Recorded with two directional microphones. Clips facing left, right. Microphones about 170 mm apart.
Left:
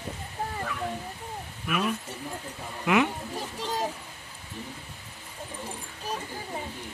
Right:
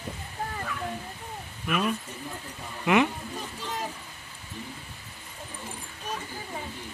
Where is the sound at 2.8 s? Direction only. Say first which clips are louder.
Right 1 dB; centre (ahead or behind).